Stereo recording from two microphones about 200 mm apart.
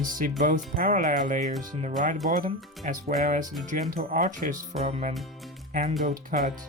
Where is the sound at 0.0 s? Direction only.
40° right (ahead or behind).